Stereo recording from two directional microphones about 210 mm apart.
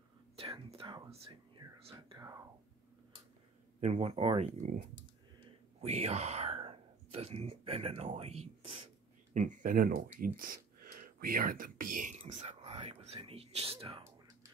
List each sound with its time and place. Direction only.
0.4 s speech: 25° right (ahead or behind)
1.6 s whispering: 15° right (ahead or behind)
3.8 s speech: 30° right (ahead or behind)
5.8 s speech: 30° right (ahead or behind)